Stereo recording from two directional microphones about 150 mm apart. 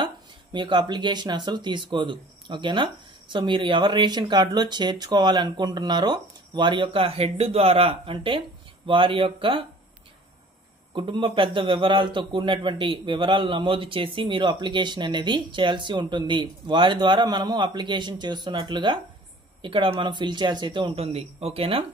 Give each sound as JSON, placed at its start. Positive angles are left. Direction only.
{"t": 0.0, "sound": "speech", "side_deg": -30}
{"t": 11.0, "sound": "speech", "side_deg": -30}